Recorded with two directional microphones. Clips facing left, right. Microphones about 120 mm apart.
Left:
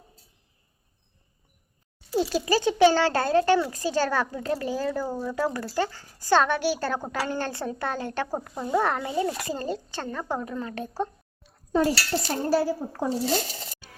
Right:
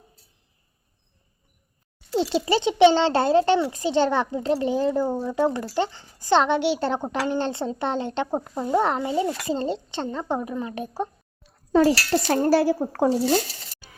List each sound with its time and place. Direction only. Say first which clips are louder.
2.1 s a child's voice: right 2 dB; 25° right (ahead or behind)
11.7 s speech: right 5 dB; 90° right; by 13.1 s 70° right (ahead or behind)